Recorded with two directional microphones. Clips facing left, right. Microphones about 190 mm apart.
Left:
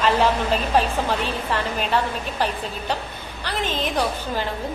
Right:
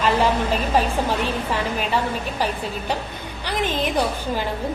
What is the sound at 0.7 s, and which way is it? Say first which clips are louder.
A woman's voice: right 1 dB; 10° right (ahead or behind).